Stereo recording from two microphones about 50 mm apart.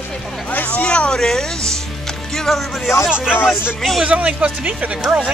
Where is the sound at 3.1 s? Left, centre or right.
Centre.